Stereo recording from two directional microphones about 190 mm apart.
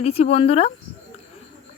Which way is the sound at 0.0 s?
30° left (ahead or behind).